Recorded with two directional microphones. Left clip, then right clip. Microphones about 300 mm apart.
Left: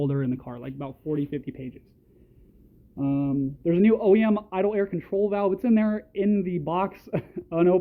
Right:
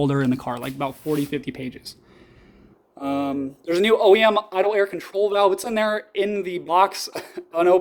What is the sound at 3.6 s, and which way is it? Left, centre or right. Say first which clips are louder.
Speech: right 5 dB; centre.